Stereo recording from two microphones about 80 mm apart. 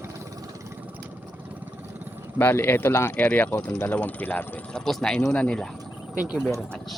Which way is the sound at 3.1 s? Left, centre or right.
Centre.